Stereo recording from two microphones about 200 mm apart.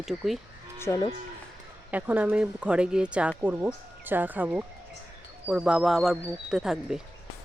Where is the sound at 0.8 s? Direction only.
15° left (ahead or behind).